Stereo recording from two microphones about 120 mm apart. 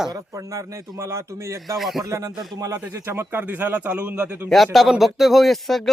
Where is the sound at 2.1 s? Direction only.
25° right (ahead or behind).